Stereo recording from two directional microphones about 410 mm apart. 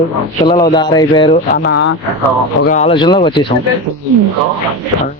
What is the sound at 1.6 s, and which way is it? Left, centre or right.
Speech, left.